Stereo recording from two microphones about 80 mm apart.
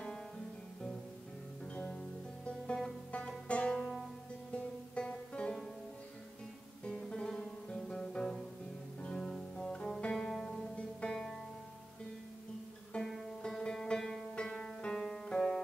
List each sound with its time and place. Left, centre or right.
1.7 s music: left
6.8 s music: centre
12.9 s music: centre